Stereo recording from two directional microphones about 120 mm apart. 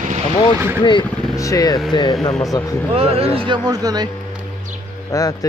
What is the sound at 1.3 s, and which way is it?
Speech, 25° left (ahead or behind).